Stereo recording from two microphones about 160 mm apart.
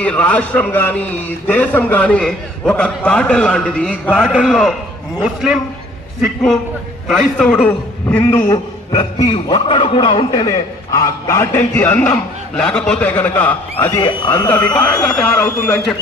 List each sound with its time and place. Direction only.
0.0 s a man's voice: 10° left (ahead or behind)
8.9 s a man's voice: 35° left (ahead or behind); by 15.8 s 10° left (ahead or behind)